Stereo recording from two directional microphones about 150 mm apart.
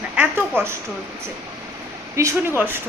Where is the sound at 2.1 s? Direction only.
20° right (ahead or behind).